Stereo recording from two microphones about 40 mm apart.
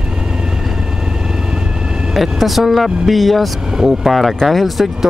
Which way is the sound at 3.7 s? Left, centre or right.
Centre.